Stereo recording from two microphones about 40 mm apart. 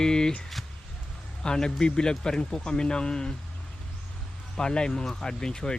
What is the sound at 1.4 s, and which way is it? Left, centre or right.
A man's voice, left.